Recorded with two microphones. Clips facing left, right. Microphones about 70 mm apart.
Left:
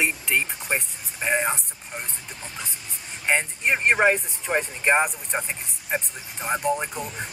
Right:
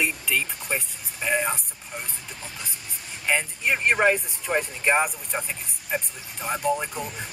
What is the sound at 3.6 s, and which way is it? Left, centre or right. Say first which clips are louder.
Speech: left 1 dB; centre.